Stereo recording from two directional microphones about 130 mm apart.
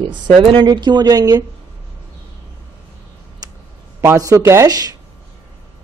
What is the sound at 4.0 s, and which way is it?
Speech, 25° right (ahead or behind).